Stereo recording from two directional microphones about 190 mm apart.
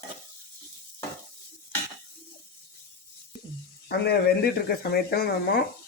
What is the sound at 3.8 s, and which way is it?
Speech, 55° left (ahead or behind).